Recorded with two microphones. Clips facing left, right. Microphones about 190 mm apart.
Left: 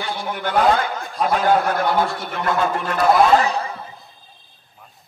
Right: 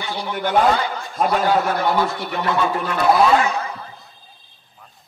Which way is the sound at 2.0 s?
Centre (ahead or behind).